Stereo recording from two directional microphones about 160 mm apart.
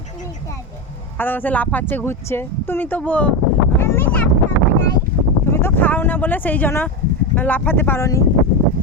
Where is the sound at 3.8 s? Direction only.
15° left (ahead or behind).